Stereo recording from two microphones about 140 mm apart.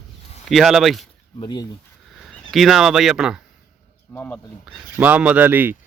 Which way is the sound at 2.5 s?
Centre (ahead or behind).